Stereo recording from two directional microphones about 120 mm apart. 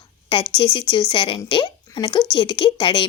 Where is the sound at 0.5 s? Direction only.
45° left (ahead or behind).